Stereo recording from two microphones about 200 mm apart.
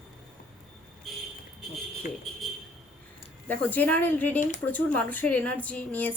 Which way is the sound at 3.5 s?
10° left (ahead or behind).